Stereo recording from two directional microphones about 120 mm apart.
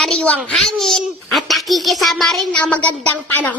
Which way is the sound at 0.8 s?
5° left (ahead or behind).